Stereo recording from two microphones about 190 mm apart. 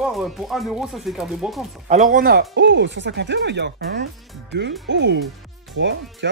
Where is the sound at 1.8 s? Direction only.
40° right (ahead or behind); by 6.3 s 70° right (ahead or behind).